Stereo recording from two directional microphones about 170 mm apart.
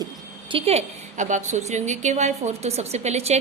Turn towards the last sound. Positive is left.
turn(degrees=-40)  # may be behind; listen again after turning